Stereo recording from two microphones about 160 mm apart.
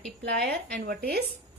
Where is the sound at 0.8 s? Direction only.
75° right (ahead or behind).